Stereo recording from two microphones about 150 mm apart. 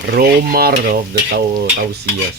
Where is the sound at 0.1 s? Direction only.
90° right.